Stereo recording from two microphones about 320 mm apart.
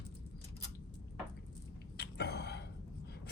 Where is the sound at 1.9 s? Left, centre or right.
Left.